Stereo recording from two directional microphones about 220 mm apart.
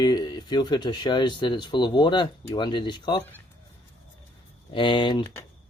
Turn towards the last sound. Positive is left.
turn(degrees=20)  # may be behind; listen again after turning